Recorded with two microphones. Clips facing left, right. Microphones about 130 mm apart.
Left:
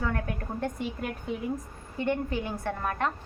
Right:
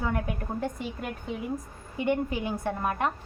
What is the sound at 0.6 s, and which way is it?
Speech, centre (ahead or behind).